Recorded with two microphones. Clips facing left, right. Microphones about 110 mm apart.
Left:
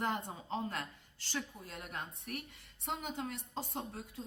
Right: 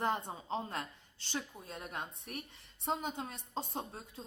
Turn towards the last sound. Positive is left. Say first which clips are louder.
# even
turn(degrees=-25)  # may be behind; listen again after turning